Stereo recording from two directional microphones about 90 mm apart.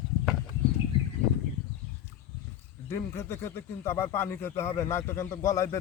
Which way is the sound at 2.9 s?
30° left (ahead or behind).